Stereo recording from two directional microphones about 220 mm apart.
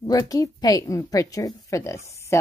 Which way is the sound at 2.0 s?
15° left (ahead or behind).